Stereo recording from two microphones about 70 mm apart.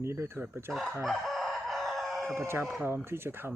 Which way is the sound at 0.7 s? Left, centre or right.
Centre.